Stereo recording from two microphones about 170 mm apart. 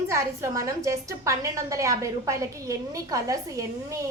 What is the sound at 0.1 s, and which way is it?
A woman's voice, 15° right (ahead or behind).